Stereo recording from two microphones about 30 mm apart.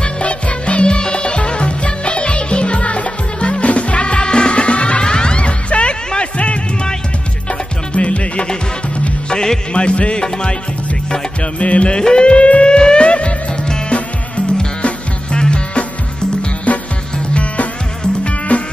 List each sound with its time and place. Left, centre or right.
0.0 s music: left
7.9 s music: left
9.8 s music: left
11.6 s music: left
11.9 s music: left
15.3 s music: left
16.7 s music: left